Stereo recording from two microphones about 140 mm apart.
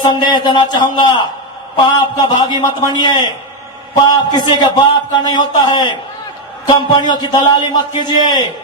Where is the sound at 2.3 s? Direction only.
30° left (ahead or behind).